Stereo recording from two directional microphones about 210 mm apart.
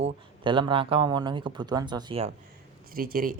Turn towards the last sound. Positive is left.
turn(degrees=-40)  # may be behind; listen again after turning